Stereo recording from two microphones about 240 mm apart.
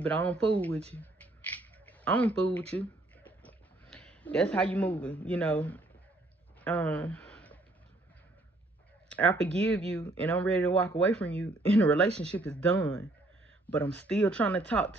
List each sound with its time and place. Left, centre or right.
0.0 s speech: centre
0.9 s a sound: centre
9.1 s speech: centre